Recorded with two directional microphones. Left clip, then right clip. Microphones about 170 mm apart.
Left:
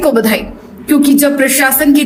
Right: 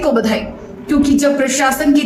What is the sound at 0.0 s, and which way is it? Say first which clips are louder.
A woman's voice: left 4 dB; 20° left (ahead or behind).